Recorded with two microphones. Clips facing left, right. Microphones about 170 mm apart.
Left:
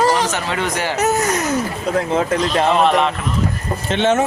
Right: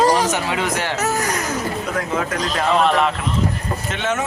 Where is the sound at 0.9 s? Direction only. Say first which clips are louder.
Left 4 dB; 20° left (ahead or behind).